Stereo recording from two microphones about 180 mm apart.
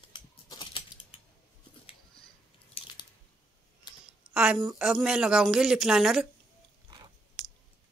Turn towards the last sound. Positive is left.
turn(degrees=-25)  # may be behind; listen again after turning